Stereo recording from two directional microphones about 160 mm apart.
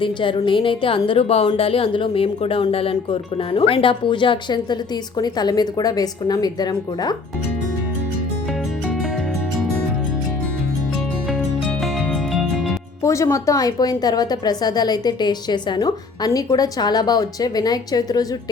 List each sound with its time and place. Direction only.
0.0 s a woman's voice: 30° left (ahead or behind)
11.8 s music: centre (ahead or behind)
13.0 s speech: 20° left (ahead or behind)